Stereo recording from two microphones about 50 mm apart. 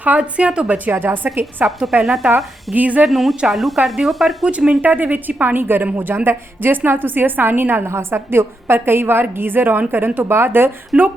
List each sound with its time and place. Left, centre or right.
0.2 s a woman's voice: right
0.9 s a woman's voice: right
1.9 s speech: centre
2.7 s a woman's voice: right
3.1 s speech: centre
4.4 s a woman's voice: centre
4.8 s a woman's voice: right
7.9 s a woman's voice: right
10.9 s a woman's voice: right